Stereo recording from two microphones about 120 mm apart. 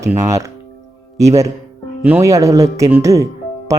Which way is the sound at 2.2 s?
25° right (ahead or behind).